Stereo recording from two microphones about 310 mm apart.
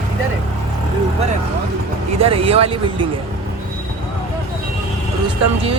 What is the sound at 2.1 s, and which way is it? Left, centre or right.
Speech, centre.